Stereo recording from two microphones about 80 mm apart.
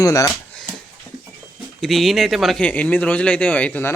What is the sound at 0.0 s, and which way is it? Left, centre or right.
Speech, left.